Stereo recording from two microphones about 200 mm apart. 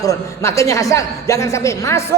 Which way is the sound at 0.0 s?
15° left (ahead or behind).